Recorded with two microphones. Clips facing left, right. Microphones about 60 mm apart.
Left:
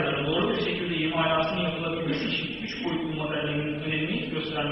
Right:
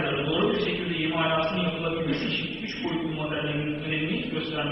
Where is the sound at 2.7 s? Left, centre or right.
Left.